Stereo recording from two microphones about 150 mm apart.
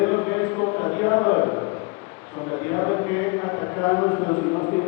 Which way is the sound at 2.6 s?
25° left (ahead or behind).